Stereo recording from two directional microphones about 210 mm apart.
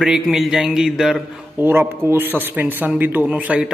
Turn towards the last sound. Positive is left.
turn(degrees=-5)  # may be behind; listen again after turning